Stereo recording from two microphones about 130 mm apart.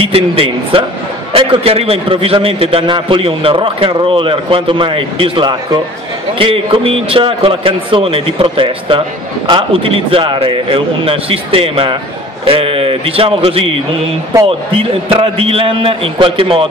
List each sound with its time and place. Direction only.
0.0 s a man's voice: 45° right (ahead or behind)